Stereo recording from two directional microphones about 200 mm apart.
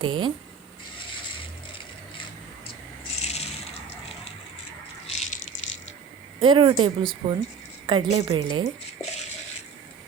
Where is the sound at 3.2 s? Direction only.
30° left (ahead or behind).